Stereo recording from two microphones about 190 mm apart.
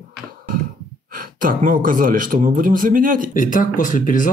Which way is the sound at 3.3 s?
45° left (ahead or behind).